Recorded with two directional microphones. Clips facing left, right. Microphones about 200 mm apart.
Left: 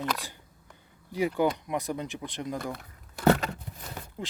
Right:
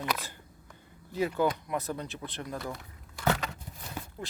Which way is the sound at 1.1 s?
15° left (ahead or behind).